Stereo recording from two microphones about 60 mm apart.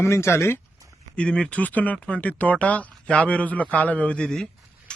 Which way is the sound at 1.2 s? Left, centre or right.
Centre.